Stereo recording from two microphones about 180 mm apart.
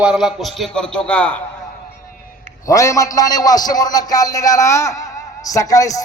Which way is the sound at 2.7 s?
20° left (ahead or behind).